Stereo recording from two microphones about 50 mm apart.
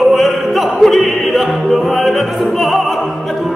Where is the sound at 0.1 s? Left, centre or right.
Centre.